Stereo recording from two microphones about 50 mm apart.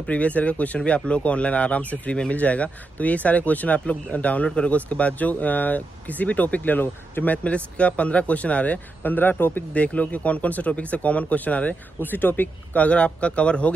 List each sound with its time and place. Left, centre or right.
0.0 s speech: left
7.4 s speech: left
9.8 s speech: left